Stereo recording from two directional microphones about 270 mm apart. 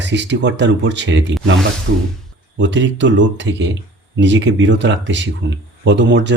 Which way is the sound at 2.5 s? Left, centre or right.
Right.